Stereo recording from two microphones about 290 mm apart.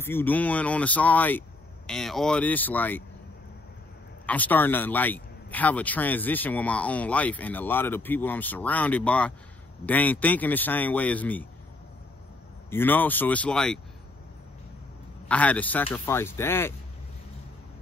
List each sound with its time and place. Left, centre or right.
0.0 s speech: centre
4.3 s speech: centre
12.6 s speech: centre
15.2 s speech: centre